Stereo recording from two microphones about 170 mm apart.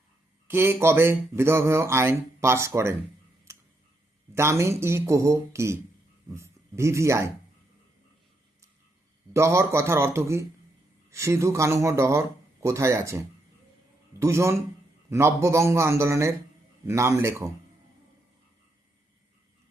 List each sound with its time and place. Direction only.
0.4 s speech: 15° right (ahead or behind)
4.4 s speech: 15° right (ahead or behind)
9.3 s speech: 15° right (ahead or behind)